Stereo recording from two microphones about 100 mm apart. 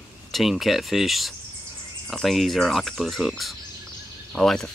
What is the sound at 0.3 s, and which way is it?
Speech, centre (ahead or behind).